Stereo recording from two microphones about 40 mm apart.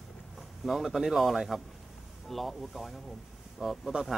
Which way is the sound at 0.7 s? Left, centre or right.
Centre.